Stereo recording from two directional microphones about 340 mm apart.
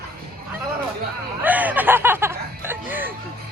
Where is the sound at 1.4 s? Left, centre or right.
Centre.